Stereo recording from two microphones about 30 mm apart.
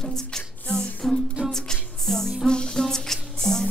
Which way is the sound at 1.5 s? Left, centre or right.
Centre.